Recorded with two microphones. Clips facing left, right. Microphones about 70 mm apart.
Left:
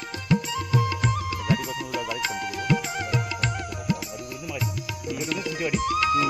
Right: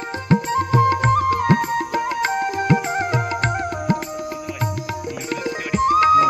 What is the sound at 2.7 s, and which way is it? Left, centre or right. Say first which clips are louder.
Music: right 5 dB; right.